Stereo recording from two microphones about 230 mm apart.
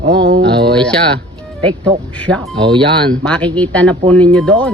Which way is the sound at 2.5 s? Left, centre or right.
Right.